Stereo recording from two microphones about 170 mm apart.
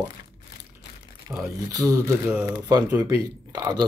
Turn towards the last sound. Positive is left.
turn(degrees=-25)  # may be behind; listen again after turning